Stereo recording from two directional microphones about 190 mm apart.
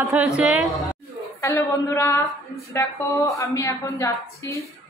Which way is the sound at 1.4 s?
15° left (ahead or behind).